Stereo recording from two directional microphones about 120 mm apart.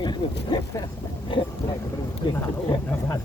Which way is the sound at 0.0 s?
35° left (ahead or behind).